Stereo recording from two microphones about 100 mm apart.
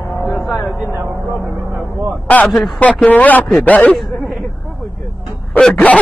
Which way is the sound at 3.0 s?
15° left (ahead or behind).